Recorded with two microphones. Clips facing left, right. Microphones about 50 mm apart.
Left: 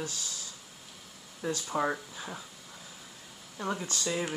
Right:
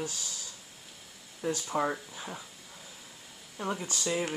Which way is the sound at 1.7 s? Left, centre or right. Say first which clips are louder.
Left 2 dB; centre.